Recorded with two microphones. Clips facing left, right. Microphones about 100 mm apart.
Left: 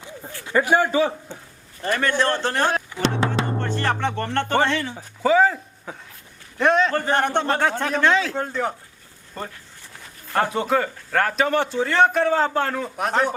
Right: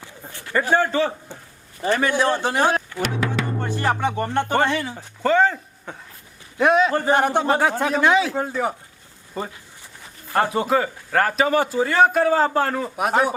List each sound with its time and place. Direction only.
0.4 s a man's voice: 10° left (ahead or behind)
1.9 s a man's voice: 10° right (ahead or behind)
3.2 s music: 25° left (ahead or behind)
3.6 s a man's voice: 10° right (ahead or behind)
4.9 s a man's voice: 5° left (ahead or behind)